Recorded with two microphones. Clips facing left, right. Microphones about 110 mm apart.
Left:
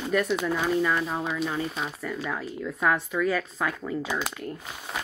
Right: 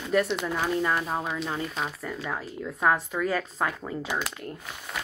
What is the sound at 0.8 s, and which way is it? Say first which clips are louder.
Speech: left 1 dB; 30° right (ahead or behind).